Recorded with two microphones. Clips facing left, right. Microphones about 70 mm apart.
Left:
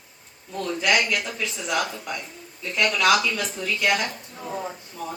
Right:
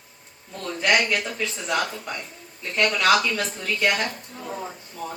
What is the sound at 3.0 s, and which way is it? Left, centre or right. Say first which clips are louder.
Speech: even; right.